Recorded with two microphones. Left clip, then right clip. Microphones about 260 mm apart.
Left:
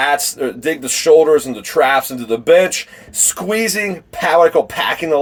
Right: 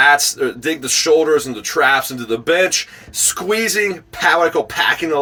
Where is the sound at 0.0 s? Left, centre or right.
Centre.